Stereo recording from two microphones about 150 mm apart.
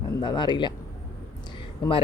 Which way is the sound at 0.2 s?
30° left (ahead or behind).